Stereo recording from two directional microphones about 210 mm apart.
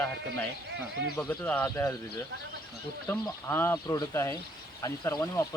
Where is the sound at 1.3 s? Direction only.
10° left (ahead or behind).